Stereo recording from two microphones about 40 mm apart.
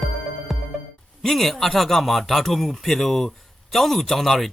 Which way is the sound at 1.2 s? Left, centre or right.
Centre.